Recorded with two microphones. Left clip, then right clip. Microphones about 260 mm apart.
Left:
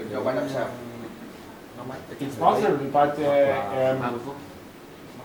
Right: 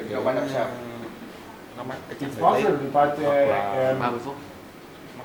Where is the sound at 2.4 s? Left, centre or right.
Centre.